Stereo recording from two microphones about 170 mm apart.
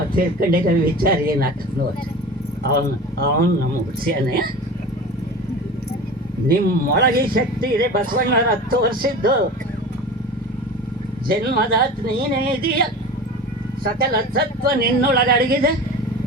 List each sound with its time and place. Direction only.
0.2 s speech: 60° right (ahead or behind)
2.6 s speech: 60° right (ahead or behind)
6.5 s speech: 60° right (ahead or behind)
11.3 s speech: 60° right (ahead or behind)